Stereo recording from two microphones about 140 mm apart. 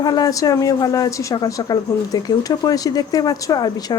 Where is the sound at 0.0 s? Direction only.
30° left (ahead or behind).